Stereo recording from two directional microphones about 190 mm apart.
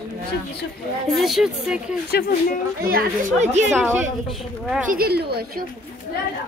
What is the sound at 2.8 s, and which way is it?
Speech, 50° right (ahead or behind).